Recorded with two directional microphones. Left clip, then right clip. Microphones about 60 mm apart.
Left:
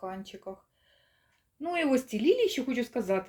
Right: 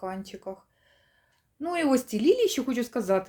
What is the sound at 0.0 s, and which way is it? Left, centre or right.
Speech, right.